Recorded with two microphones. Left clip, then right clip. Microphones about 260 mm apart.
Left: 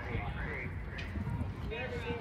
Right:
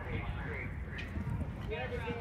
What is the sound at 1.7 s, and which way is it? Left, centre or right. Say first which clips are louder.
Vehicle: even; right.